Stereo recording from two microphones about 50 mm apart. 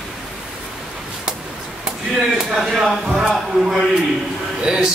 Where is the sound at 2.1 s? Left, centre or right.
Centre.